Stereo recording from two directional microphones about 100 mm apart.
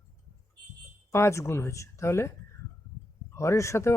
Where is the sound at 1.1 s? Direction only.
25° left (ahead or behind).